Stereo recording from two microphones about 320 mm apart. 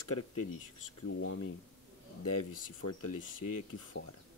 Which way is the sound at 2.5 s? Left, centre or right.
Left.